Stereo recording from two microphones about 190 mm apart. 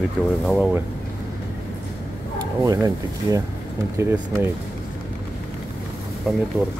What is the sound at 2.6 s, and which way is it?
Speech, 20° right (ahead or behind).